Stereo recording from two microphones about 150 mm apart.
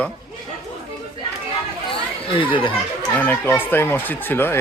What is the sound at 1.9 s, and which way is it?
Chatter, 35° left (ahead or behind).